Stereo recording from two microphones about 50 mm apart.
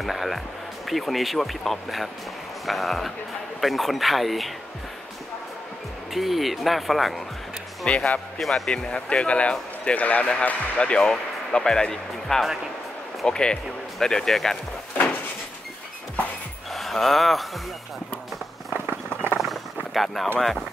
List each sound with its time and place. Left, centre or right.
0.0 s speech: centre
6.1 s speech: centre
7.8 s speech: left
8.4 s speech: centre
8.7 s speech: centre
11.0 s speech: centre
16.7 s speech: centre
19.4 s a sound: centre
20.3 s speech: centre